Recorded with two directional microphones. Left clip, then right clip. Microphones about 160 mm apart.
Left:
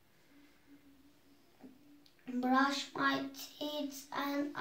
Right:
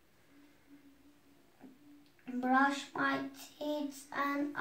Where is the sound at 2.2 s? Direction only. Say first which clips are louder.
Right 2 dB; 5° left (ahead or behind).